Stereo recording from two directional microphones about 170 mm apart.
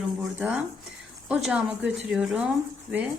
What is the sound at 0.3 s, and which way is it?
A woman's voice, 10° right (ahead or behind).